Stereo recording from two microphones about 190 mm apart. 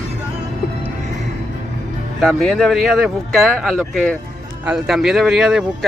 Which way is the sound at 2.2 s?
Centre (ahead or behind).